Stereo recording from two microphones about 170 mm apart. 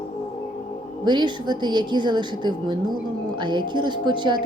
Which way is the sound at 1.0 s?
25° right (ahead or behind).